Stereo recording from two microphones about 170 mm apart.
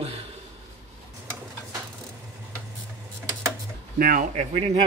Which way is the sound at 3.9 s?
60° right (ahead or behind).